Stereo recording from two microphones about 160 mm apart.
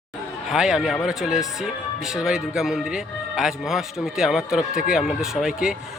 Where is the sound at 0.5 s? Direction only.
5° right (ahead or behind).